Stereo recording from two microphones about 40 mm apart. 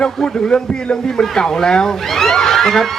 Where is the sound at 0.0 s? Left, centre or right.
Left.